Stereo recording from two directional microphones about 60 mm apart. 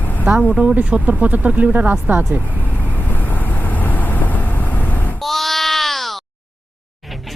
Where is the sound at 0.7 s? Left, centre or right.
Right.